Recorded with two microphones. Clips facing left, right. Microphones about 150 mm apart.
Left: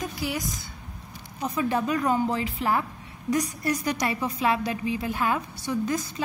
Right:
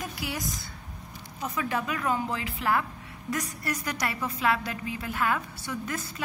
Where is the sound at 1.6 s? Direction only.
30° left (ahead or behind).